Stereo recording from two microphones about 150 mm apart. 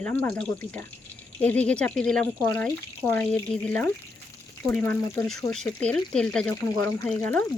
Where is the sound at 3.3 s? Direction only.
5° left (ahead or behind).